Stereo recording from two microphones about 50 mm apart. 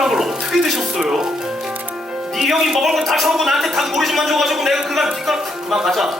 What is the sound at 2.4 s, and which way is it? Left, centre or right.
Speech, centre.